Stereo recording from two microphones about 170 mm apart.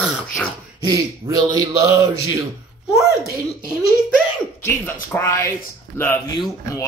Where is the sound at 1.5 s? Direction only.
20° right (ahead or behind).